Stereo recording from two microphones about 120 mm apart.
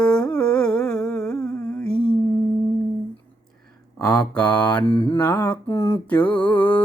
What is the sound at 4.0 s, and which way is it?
Mantra, 30° left (ahead or behind).